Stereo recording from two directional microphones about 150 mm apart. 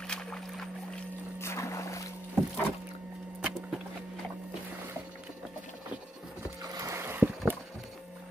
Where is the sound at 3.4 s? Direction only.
5° right (ahead or behind).